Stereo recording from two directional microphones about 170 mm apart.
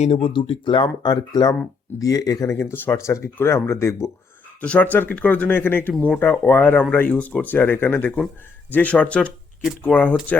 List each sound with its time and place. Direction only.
0.0 s speech: 35° left (ahead or behind); by 10.2 s 10° left (ahead or behind)